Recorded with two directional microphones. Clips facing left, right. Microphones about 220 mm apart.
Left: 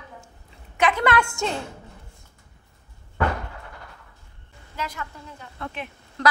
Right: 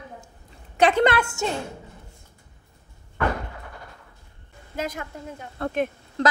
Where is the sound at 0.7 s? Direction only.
30° right (ahead or behind).